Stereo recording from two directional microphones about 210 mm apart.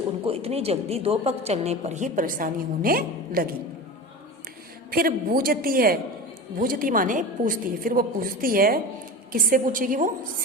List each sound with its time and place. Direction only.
0.3 s a woman's voice: 30° right (ahead or behind); by 3.5 s 45° right (ahead or behind)
4.9 s a woman's voice: 45° right (ahead or behind)